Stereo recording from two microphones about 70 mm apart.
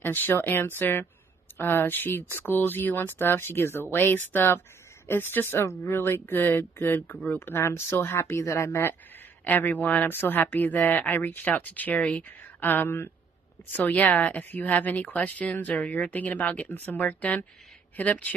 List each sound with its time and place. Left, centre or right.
0.0 s speech: left
9.4 s speech: left
13.7 s speech: left